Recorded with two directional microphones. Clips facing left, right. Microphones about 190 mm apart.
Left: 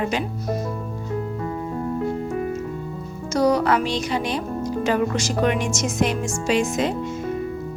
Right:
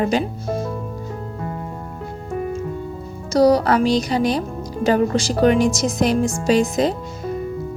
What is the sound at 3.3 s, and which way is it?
Speech, 35° right (ahead or behind).